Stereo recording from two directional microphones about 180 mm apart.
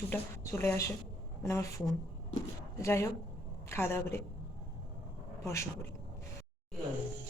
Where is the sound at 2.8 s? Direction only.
15° left (ahead or behind).